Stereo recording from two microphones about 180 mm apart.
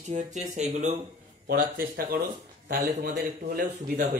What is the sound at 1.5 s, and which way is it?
A man's voice, 55° right (ahead or behind).